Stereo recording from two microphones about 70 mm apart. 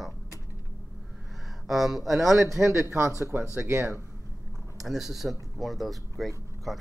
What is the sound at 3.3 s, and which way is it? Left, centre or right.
Speech, right.